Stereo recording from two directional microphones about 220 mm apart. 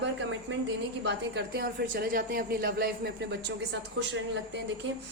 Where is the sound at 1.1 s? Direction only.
50° right (ahead or behind).